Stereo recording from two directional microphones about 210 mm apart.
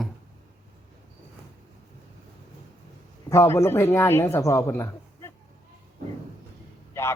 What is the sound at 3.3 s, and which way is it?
Speech, 15° left (ahead or behind).